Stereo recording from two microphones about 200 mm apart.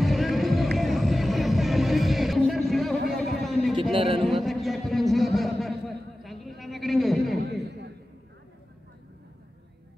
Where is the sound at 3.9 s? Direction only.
25° right (ahead or behind).